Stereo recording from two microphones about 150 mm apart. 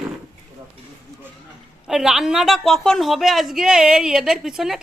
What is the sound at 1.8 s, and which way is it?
A woman's voice, 5° right (ahead or behind).